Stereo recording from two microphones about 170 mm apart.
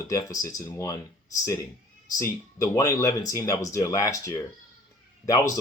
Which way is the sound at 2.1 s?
20° left (ahead or behind).